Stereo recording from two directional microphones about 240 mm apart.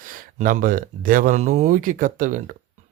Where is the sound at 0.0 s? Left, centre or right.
Right.